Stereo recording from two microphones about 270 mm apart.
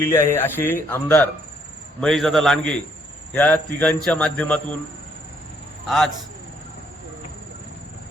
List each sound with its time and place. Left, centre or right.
0.0 s a man's voice: centre